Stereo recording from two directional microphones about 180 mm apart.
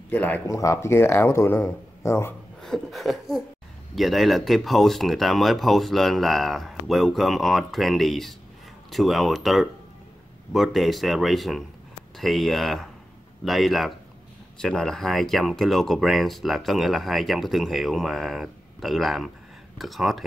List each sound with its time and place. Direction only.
0.1 s speech: 10° left (ahead or behind)
2.6 s speech: centre (ahead or behind)